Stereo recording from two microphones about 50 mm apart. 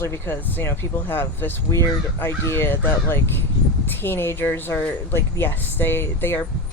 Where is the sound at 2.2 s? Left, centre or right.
Left.